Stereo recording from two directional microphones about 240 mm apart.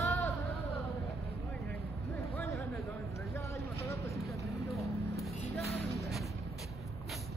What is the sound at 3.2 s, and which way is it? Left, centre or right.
Vehicle, centre.